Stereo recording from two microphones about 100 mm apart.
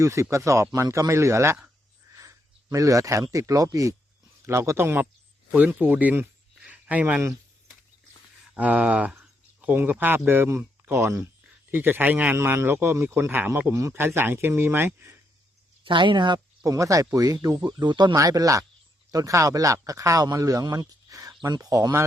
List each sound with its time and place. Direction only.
0.0 s speech: 30° right (ahead or behind)
2.1 s a sound: 35° right (ahead or behind)
3.3 s a man's voice: 35° right (ahead or behind); by 6.2 s 15° right (ahead or behind)
6.6 s a sound: 15° right (ahead or behind)
8.5 s a man's voice: 15° right (ahead or behind)
15.8 s speech: 55° right (ahead or behind)
16.6 s speech: 30° right (ahead or behind); by 18.2 s 50° right (ahead or behind)
18.2 s speech: 35° right (ahead or behind)